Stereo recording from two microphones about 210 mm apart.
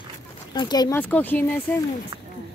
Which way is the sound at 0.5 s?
20° left (ahead or behind).